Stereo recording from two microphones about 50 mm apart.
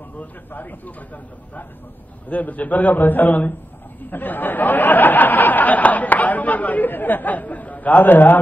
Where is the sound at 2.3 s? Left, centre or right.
Left.